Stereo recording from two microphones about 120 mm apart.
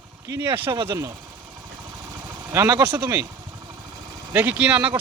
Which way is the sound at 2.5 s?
20° right (ahead or behind).